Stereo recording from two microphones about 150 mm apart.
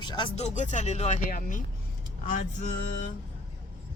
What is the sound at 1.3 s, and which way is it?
Vehicle, 60° left (ahead or behind).